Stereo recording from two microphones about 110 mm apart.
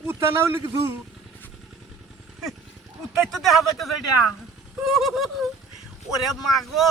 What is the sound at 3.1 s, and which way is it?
Speech, centre (ahead or behind).